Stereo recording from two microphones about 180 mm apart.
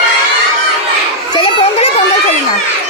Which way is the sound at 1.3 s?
30° left (ahead or behind).